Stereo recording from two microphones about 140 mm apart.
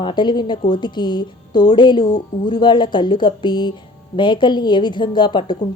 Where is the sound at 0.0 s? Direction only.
35° left (ahead or behind).